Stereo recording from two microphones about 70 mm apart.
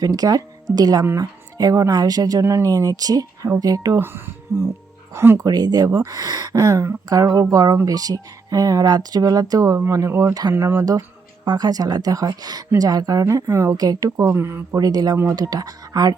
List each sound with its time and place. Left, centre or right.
0.0 s speech: right
2.4 s speech: right
2.6 s speech: right
4.5 s speech: right
5.4 s speech: right
11.4 s speech: right
14.3 s speech: right
14.8 s speech: right